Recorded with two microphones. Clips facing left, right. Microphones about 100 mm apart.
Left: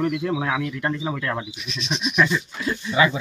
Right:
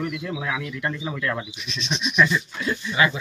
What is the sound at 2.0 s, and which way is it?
Speech, 50° left (ahead or behind).